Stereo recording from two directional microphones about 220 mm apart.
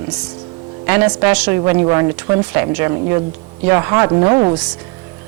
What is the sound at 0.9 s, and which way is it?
A man's voice, 10° right (ahead or behind).